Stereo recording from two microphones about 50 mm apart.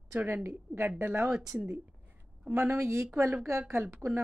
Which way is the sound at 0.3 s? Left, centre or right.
Right.